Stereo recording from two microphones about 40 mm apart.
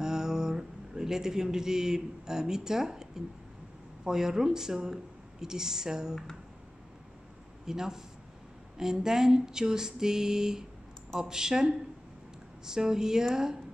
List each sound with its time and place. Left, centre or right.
0.0 s speech: centre
7.6 s speech: centre